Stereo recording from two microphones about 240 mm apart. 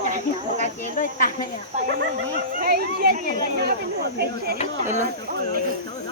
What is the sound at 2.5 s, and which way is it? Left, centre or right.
Speech, right.